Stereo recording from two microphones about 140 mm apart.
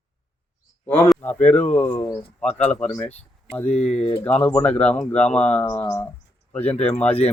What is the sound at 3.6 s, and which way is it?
Speech, 50° left (ahead or behind).